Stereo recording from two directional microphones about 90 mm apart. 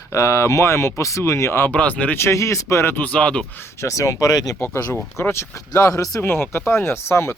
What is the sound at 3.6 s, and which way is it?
Speech, 35° left (ahead or behind).